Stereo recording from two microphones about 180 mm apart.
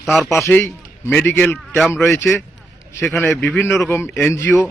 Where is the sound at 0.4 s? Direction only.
15° left (ahead or behind).